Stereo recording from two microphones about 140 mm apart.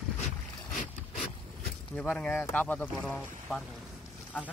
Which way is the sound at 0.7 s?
65° left (ahead or behind).